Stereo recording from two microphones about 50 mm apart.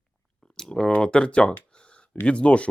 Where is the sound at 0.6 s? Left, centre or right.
Centre.